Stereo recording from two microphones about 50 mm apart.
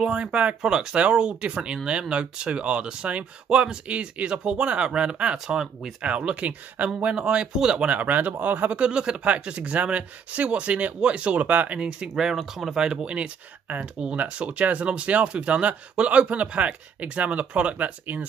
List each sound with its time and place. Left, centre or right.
0.0 s speech: centre
6.0 s speech: right
7.9 s speech: right; by 12.4 s centre
12.4 s speech: centre
12.7 s speech: centre; by 18.2 s right